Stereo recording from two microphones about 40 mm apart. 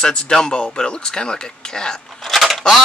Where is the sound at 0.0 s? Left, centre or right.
Centre.